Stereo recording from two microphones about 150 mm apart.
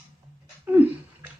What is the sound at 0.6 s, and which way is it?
Bathtub, 10° right (ahead or behind).